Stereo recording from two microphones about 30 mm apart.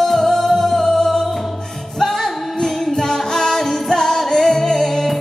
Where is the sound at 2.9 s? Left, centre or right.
Centre.